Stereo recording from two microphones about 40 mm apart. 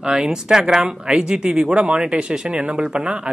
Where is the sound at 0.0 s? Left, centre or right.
Centre.